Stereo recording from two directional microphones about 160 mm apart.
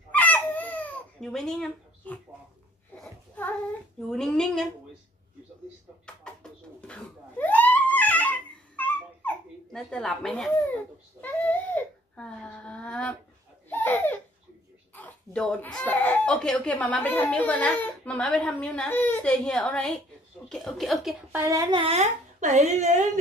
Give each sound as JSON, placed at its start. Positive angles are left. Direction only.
{"t": 0.1, "sound": "a sound", "side_deg": 10}
{"t": 3.0, "sound": "child singing", "side_deg": 10}
{"t": 4.1, "sound": "speech", "side_deg": 0}
{"t": 6.0, "sound": "a sound", "side_deg": 5}
{"t": 11.1, "sound": "baby cry", "side_deg": 10}
{"t": 13.7, "sound": "laughter", "side_deg": 10}
{"t": 15.0, "sound": "speech", "side_deg": 5}
{"t": 21.3, "sound": "speech", "side_deg": -15}
{"t": 21.7, "sound": "speech", "side_deg": -40}